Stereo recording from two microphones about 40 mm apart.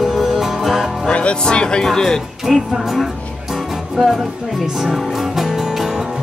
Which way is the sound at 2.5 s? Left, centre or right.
Centre.